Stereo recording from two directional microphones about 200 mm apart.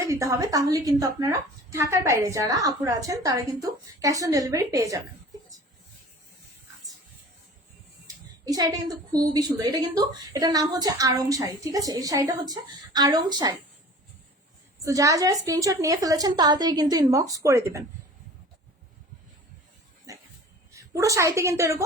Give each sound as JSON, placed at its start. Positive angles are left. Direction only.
{"t": 0.0, "sound": "a woman's voice", "side_deg": -15}
{"t": 8.0, "sound": "a woman's voice", "side_deg": -20}
{"t": 14.8, "sound": "a woman's voice", "side_deg": -15}
{"t": 20.1, "sound": "dog", "side_deg": -15}
{"t": 20.7, "sound": "a woman's voice", "side_deg": -15}